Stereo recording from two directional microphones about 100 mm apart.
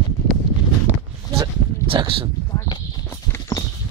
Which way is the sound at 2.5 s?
40° left (ahead or behind).